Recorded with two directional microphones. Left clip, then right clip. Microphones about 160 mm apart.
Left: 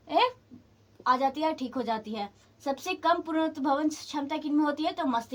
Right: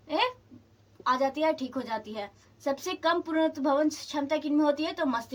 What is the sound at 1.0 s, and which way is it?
A woman's voice, 25° left (ahead or behind).